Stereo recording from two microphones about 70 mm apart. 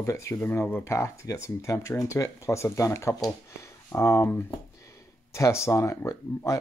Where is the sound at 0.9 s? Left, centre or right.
Left.